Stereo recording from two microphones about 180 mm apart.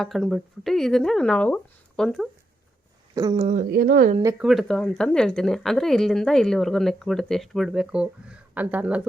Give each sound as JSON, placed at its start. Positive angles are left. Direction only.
{"t": 0.0, "sound": "speech", "side_deg": 0}
{"t": 3.3, "sound": "speech", "side_deg": -35}
{"t": 3.6, "sound": "speech", "side_deg": -60}
{"t": 4.4, "sound": "speech", "side_deg": 0}